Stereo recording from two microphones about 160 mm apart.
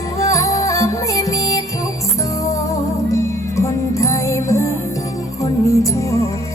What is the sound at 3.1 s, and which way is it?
Music, 20° left (ahead or behind).